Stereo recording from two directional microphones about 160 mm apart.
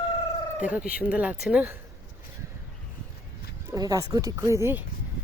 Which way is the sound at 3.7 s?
20° right (ahead or behind).